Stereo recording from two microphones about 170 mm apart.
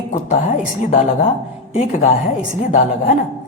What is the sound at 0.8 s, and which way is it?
A woman's voice, 45° left (ahead or behind).